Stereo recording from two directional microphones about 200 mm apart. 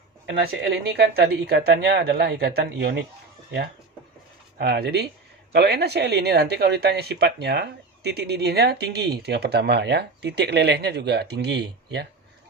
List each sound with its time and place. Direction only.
0.3 s speech: 55° right (ahead or behind)
4.5 s speech: 55° right (ahead or behind)